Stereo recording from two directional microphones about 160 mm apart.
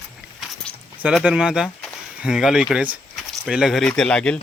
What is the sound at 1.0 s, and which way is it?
Speech, 5° right (ahead or behind).